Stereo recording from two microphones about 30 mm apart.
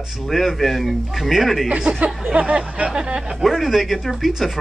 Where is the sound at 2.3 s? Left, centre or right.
Right.